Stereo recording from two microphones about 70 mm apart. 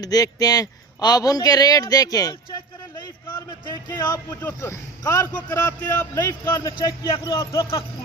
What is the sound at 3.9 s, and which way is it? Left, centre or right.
Speech, left.